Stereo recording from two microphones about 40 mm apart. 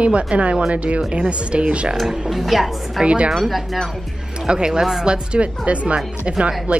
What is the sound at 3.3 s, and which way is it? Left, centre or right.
Speech, centre.